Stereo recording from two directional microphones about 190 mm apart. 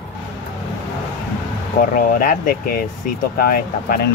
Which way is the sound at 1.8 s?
50° left (ahead or behind).